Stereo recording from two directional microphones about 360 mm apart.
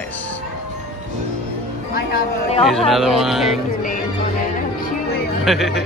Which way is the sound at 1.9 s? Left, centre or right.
Left.